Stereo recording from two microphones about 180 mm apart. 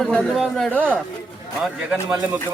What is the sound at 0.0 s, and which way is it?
Speech, 5° left (ahead or behind).